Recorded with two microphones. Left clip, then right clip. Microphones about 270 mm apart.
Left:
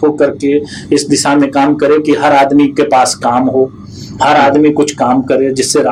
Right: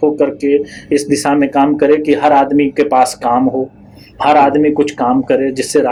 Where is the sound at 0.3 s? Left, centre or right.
Right.